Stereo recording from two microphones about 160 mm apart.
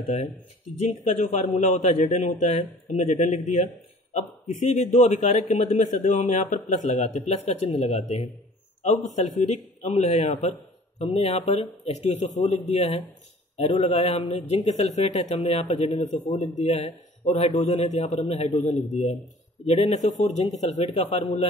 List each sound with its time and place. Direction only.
0.1 s a man's voice: 45° left (ahead or behind)
9.1 s a man's voice: 45° left (ahead or behind)